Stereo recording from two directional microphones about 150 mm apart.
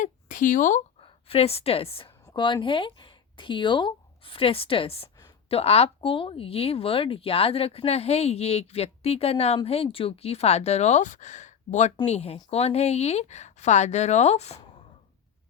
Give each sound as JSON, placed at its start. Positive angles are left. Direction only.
{"t": 0.0, "sound": "speech", "side_deg": 60}
{"t": 1.0, "sound": "a woman's voice", "side_deg": 40}